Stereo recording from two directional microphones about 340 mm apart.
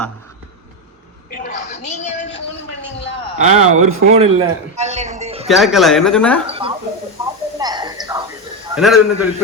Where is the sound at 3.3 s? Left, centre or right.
Centre.